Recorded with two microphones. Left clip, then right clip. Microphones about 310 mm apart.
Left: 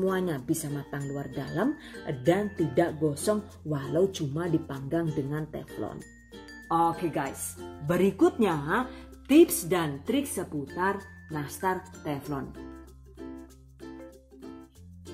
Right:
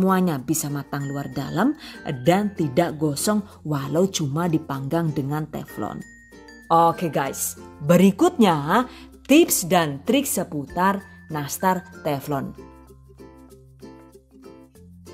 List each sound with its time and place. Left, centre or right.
0.0 s speech: right